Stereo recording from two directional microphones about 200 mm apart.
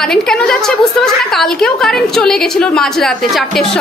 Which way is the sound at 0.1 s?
5° left (ahead or behind).